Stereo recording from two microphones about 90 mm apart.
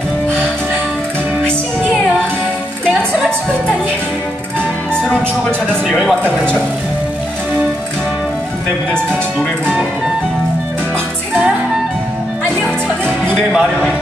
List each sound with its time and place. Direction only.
3.1 s music: 10° left (ahead or behind)
5.7 s a man's voice: 5° left (ahead or behind)
8.9 s speech: 10° left (ahead or behind)
13.0 s music: 20° right (ahead or behind)
13.5 s speech: 5° right (ahead or behind)